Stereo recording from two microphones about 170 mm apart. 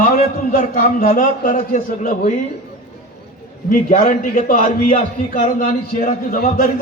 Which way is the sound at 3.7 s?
50° left (ahead or behind).